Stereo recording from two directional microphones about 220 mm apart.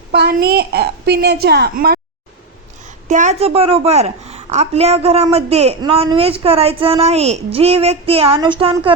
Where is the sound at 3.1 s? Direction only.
35° right (ahead or behind).